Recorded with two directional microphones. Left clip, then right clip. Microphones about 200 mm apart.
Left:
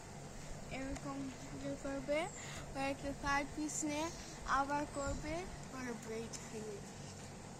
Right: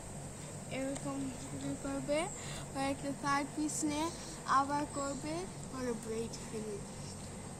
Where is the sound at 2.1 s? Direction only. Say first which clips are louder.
Right 3 dB; 5° left (ahead or behind).